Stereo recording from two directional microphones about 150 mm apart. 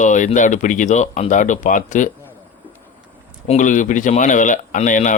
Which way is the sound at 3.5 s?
55° left (ahead or behind).